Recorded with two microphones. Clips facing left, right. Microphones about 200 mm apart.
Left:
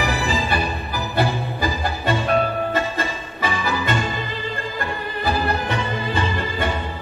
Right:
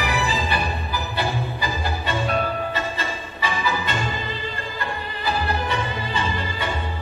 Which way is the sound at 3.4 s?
50° left (ahead or behind).